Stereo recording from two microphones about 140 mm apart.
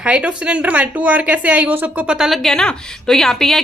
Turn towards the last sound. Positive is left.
turn(degrees=0)  # may be behind; listen again after turning